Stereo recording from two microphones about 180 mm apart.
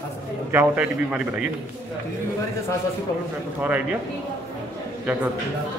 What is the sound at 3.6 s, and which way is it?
Speech, 10° right (ahead or behind).